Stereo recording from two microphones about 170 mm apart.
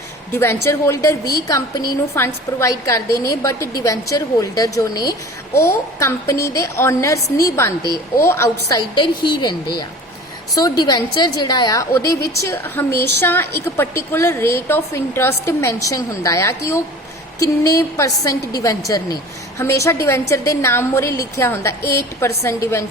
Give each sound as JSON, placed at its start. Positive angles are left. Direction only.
{"t": 0.3, "sound": "a woman's voice", "side_deg": 15}
{"t": 9.0, "sound": "a woman's voice", "side_deg": 25}
{"t": 12.9, "sound": "a woman's voice", "side_deg": -80}
{"t": 13.2, "sound": "a woman's voice", "side_deg": 15}